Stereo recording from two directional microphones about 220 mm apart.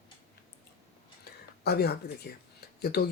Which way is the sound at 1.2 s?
45° left (ahead or behind).